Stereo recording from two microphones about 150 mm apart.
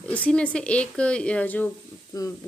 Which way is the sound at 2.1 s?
25° left (ahead or behind).